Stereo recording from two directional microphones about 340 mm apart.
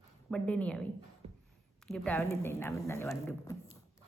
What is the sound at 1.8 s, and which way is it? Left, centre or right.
Speech, centre.